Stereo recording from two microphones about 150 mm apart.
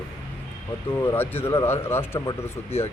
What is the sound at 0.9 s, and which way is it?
Speech, 15° left (ahead or behind).